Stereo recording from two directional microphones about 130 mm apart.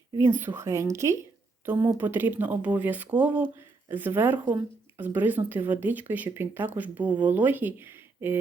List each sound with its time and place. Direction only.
0.2 s speech: 20° right (ahead or behind)